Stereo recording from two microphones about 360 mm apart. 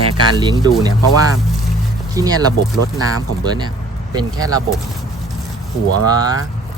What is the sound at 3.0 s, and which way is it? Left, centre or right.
Speech, right.